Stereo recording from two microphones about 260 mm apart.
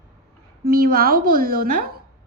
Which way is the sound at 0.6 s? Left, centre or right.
Right.